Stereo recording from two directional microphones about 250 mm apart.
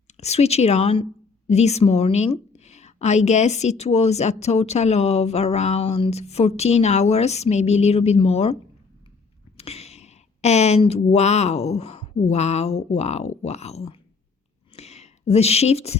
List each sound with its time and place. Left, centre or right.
0.1 s a woman's voice: left
9.6 s speech: left
14.8 s a sound: left